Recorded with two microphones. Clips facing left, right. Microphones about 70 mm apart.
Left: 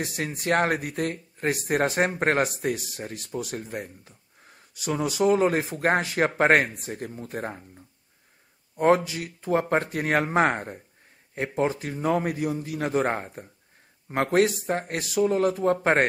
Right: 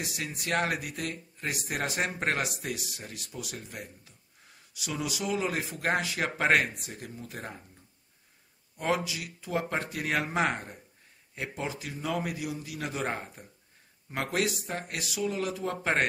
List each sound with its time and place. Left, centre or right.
0.0 s speech: left
8.7 s speech: left